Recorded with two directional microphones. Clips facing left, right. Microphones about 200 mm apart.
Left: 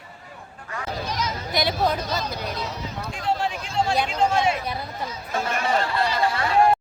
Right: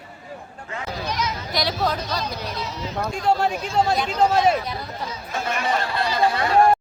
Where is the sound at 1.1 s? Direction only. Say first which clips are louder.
Even; 50° left (ahead or behind).